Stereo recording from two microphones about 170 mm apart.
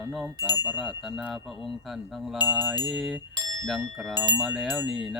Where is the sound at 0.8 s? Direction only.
Centre (ahead or behind).